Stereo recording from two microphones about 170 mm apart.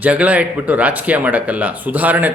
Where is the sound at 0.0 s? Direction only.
10° right (ahead or behind).